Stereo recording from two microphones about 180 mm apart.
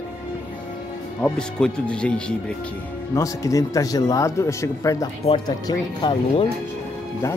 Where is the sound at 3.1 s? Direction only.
20° left (ahead or behind).